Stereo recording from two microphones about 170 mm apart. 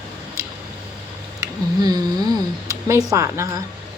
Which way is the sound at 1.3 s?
25° right (ahead or behind).